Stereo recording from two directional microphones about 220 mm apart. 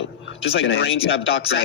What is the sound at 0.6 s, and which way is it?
Speech, 60° left (ahead or behind).